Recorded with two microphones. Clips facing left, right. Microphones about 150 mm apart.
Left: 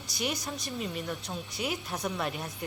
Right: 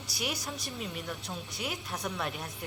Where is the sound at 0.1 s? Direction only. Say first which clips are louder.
Left 3 dB; centre (ahead or behind).